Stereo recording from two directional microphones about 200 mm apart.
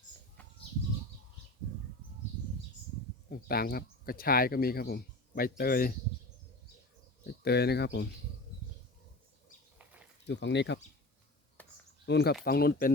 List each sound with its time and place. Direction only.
3.2 s speech: 50° left (ahead or behind)
7.4 s speech: 55° left (ahead or behind)
10.2 s speech: 60° left (ahead or behind)
11.6 s a sound: 10° left (ahead or behind)
12.0 s speech: 55° left (ahead or behind)